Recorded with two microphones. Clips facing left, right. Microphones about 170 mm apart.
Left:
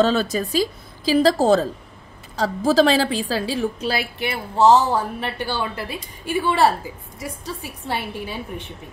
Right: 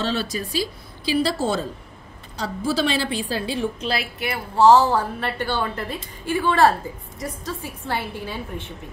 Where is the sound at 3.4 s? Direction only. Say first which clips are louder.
Left 2 dB; 35° left (ahead or behind).